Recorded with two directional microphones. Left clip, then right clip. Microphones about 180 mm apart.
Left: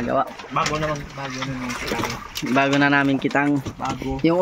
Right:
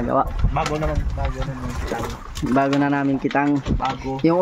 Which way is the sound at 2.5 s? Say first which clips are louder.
Left 2 dB; 20° right (ahead or behind).